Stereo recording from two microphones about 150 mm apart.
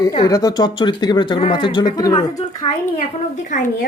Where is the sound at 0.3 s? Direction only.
25° left (ahead or behind).